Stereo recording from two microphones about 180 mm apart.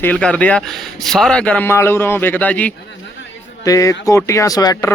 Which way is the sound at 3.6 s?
20° left (ahead or behind).